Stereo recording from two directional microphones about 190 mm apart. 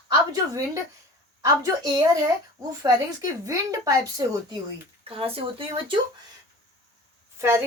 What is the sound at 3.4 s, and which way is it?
Speech, 15° right (ahead or behind).